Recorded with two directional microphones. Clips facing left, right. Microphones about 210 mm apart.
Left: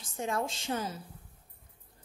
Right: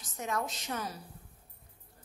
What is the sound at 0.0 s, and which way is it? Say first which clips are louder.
A woman's voice: left 2 dB; 30° left (ahead or behind).